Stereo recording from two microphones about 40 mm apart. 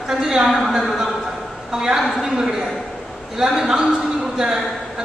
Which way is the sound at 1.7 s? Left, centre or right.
Centre.